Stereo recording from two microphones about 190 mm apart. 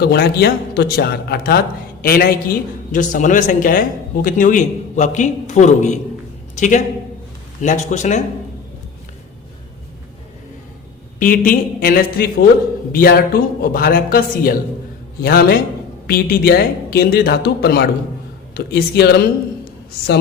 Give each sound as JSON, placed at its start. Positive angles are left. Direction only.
{"t": 0.0, "sound": "a man's voice", "side_deg": 60}
{"t": 11.2, "sound": "a man's voice", "side_deg": 45}